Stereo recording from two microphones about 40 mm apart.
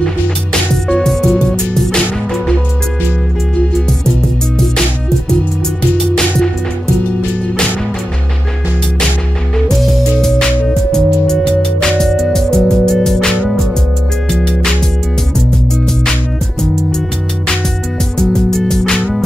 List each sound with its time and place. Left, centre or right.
0.9 s music: centre
10.2 s music: centre
18.1 s music: centre